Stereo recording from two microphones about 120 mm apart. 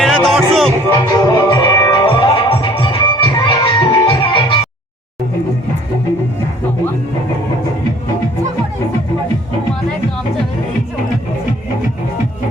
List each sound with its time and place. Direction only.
0.0 s music: 5° left (ahead or behind)
1.1 s music: 35° left (ahead or behind)